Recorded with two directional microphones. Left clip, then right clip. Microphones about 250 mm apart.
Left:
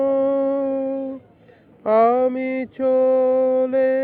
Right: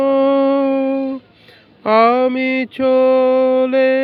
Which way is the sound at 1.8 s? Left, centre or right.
Right.